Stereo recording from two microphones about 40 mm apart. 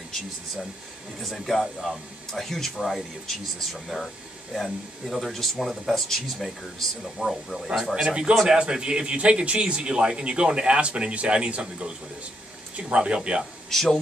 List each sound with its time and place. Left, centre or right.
1.3 s speech: centre
7.9 s a man's voice: right
13.7 s speech: centre